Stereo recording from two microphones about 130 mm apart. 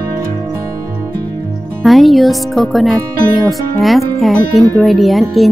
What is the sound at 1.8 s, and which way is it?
Speech, centre (ahead or behind).